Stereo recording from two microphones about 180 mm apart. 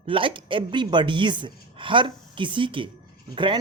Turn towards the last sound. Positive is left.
turn(degrees=-25)  # may be behind; listen again after turning